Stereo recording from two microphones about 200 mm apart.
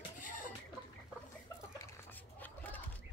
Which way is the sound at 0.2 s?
40° left (ahead or behind).